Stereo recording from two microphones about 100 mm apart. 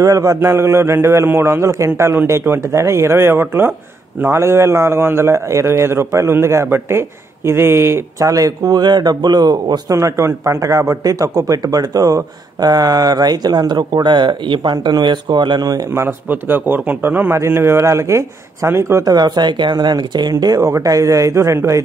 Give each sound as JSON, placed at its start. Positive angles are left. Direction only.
{"t": 0.0, "sound": "a man's voice", "side_deg": -35}
{"t": 9.9, "sound": "a man's voice", "side_deg": -30}
{"t": 15.9, "sound": "a man's voice", "side_deg": -25}
{"t": 19.0, "sound": "a man's voice", "side_deg": -45}